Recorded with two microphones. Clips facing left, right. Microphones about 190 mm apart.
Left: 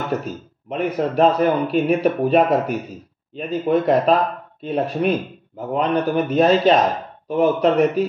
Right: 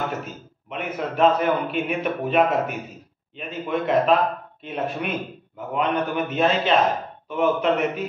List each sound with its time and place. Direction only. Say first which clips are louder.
0.7 s a man's voice: left 7 dB; 35° left (ahead or behind)